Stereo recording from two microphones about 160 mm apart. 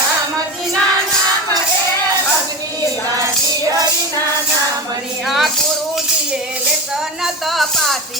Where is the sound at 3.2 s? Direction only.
20° right (ahead or behind).